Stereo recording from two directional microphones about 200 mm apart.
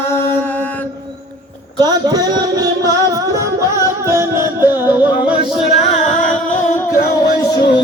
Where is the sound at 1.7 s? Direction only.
20° right (ahead or behind).